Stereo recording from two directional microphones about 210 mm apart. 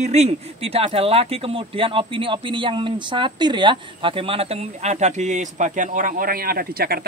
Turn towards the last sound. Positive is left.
turn(degrees=-45)  # may be behind; listen again after turning